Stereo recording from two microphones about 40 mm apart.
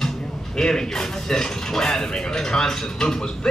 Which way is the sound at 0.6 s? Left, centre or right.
Centre.